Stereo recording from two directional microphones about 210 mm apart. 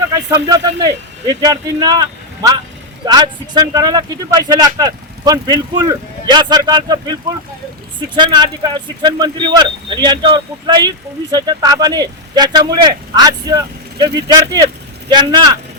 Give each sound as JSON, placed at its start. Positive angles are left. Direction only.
{"t": 0.1, "sound": "speech", "side_deg": -20}